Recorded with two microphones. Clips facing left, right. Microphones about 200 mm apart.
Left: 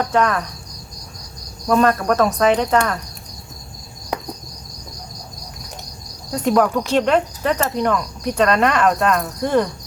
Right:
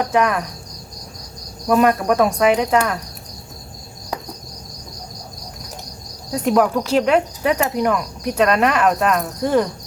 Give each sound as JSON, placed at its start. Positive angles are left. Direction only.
{"t": 0.0, "sound": "cricket", "side_deg": -10}
{"t": 1.6, "sound": "cricket", "side_deg": -10}
{"t": 6.3, "sound": "speech", "side_deg": -5}